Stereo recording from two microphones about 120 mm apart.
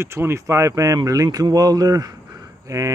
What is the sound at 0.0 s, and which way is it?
Speech, 20° right (ahead or behind).